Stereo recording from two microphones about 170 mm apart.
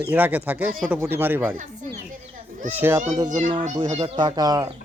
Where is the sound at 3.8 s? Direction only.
30° right (ahead or behind).